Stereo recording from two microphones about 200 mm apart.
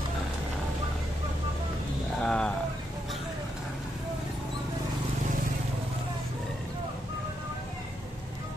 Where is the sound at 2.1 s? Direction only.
5° left (ahead or behind).